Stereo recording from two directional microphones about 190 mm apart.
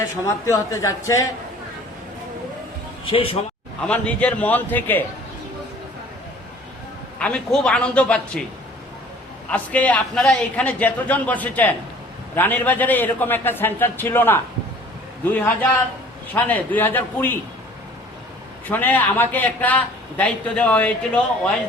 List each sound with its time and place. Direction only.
0.4 s a man's voice: 15° left (ahead or behind)
3.1 s a man's voice: 30° left (ahead or behind)
3.8 s a man's voice: 5° left (ahead or behind)
7.2 s a woman's voice: 5° left (ahead or behind)
9.5 s a man's voice: 5° left (ahead or behind)
18.7 s a man's voice: 10° left (ahead or behind)